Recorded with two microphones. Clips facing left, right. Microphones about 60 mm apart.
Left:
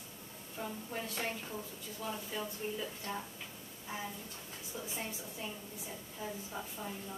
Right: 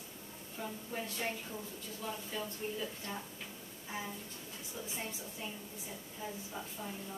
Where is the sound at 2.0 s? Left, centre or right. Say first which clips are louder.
Left 1 dB; centre.